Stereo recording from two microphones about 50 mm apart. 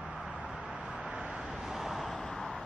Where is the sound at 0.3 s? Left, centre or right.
Right.